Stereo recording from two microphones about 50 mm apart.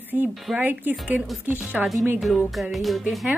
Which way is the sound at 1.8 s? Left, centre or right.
Centre.